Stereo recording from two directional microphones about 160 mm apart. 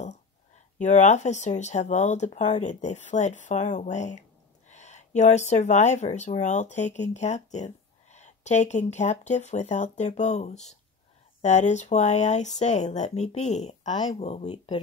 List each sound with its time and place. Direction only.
0.7 s speech: 50° left (ahead or behind)
13.9 s speech: 30° left (ahead or behind)